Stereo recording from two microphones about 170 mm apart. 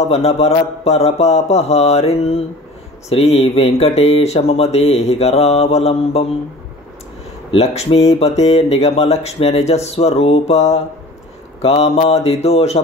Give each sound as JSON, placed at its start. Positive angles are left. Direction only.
{"t": 0.1, "sound": "speech", "side_deg": 40}
{"t": 7.5, "sound": "speech", "side_deg": 35}